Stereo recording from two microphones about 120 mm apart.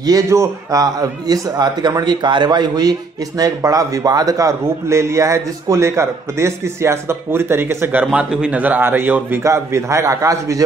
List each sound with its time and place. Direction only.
0.0 s a man's voice: 25° right (ahead or behind)